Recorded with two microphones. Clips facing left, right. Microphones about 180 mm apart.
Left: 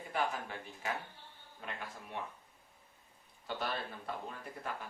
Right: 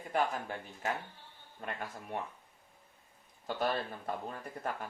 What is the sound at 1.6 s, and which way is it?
Speech, 45° right (ahead or behind).